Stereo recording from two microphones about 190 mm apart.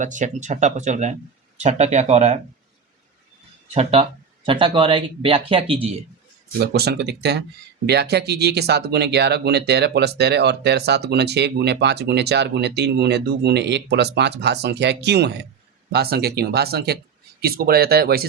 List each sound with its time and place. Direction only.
0.0 s speech: 40° right (ahead or behind)
4.4 s speech: 25° right (ahead or behind)
6.6 s speech: 60° right (ahead or behind)